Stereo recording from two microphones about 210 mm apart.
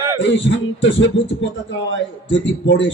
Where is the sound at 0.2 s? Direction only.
60° left (ahead or behind).